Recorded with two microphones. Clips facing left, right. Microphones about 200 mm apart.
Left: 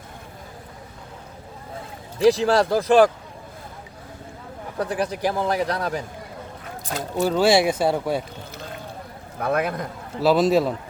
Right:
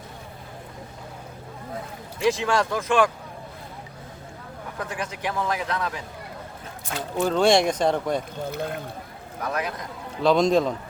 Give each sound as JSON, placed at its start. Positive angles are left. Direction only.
{"t": 2.1, "sound": "a man's voice", "side_deg": 35}
{"t": 4.8, "sound": "a man's voice", "side_deg": 35}
{"t": 7.2, "sound": "speech", "side_deg": 5}
{"t": 8.4, "sound": "speech", "side_deg": -55}
{"t": 9.4, "sound": "a man's voice", "side_deg": 55}
{"t": 10.2, "sound": "a man's voice", "side_deg": 5}